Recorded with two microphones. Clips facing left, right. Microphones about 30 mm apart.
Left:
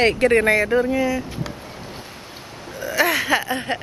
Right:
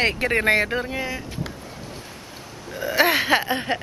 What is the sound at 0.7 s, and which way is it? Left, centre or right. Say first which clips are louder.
Speech: left 7 dB; centre.